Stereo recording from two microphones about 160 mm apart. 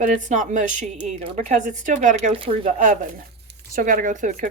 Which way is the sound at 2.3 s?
35° right (ahead or behind).